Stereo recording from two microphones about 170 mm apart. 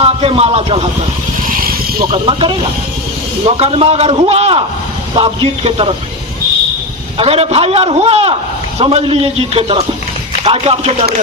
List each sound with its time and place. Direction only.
0.0 s speech: 35° right (ahead or behind)
1.5 s vehicle: 55° right (ahead or behind)
2.0 s a man's voice: 30° right (ahead or behind)
7.2 s a man's voice: 35° right (ahead or behind)